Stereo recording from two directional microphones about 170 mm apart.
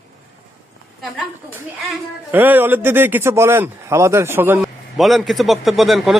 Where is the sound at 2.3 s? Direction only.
10° right (ahead or behind).